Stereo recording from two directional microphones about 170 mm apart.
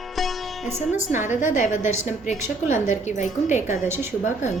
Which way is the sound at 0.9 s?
45° left (ahead or behind).